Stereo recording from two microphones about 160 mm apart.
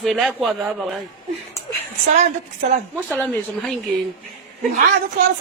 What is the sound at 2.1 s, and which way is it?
Speech, 45° right (ahead or behind).